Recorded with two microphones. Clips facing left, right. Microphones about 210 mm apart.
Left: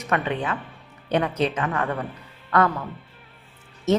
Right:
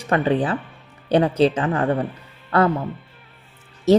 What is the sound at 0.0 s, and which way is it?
Speech, 30° right (ahead or behind).